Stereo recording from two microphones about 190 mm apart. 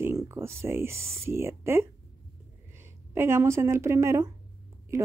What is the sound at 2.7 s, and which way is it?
A woman's voice, 10° right (ahead or behind).